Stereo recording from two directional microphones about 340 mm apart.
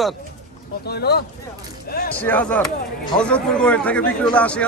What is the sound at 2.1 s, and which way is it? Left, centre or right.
Speech, centre.